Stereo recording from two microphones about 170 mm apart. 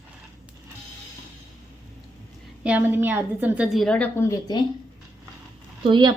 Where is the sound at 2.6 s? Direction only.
10° right (ahead or behind); by 4.6 s 20° left (ahead or behind).